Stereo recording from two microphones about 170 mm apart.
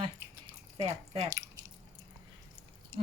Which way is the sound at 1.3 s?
20° right (ahead or behind).